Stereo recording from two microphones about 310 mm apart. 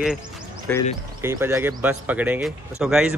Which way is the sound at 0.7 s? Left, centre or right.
Centre.